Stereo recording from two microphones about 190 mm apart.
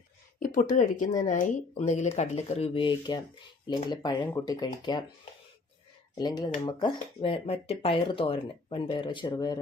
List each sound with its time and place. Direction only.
0.3 s speech: 45° left (ahead or behind); by 5.0 s 20° left (ahead or behind)
6.1 s speech: 20° left (ahead or behind)